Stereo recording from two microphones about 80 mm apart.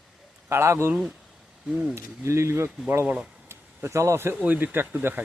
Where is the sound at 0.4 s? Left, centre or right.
Right.